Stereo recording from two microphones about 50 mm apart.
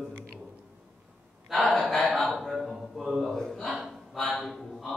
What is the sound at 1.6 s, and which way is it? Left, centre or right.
Speech, left.